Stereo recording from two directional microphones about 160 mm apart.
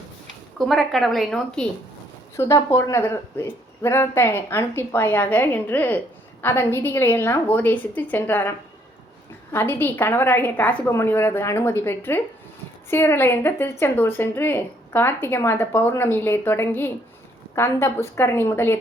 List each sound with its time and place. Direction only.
0.7 s a woman's voice: centre (ahead or behind)
2.3 s speech: 15° left (ahead or behind)